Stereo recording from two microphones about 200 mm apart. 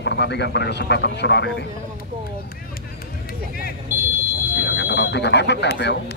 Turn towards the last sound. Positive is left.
turn(degrees=60)  # may be behind; listen again after turning